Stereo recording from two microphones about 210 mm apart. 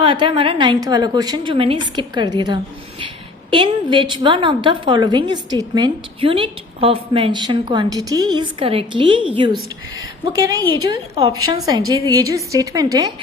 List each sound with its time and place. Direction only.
0.0 s a woman's voice: 25° right (ahead or behind)